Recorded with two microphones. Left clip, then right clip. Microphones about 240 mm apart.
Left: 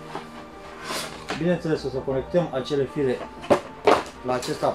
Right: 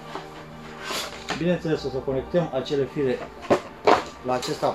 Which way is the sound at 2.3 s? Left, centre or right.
Centre.